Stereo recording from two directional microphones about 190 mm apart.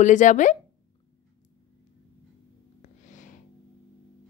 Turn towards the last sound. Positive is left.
turn(degrees=40)  # may be behind; listen again after turning